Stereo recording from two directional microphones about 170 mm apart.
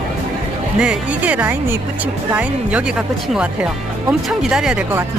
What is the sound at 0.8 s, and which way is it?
Speech, 5° right (ahead or behind).